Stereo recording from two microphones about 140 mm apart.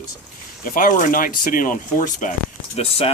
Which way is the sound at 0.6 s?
80° left.